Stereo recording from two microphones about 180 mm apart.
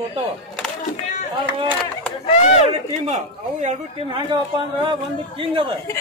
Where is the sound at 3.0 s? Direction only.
40° right (ahead or behind).